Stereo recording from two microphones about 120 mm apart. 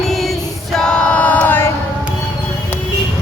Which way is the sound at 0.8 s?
5° left (ahead or behind).